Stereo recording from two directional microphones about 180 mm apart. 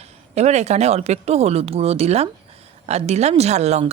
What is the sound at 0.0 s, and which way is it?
A woman's voice, 35° right (ahead or behind).